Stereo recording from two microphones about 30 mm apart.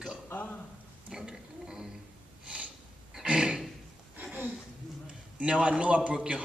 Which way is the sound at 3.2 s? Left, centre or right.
Right.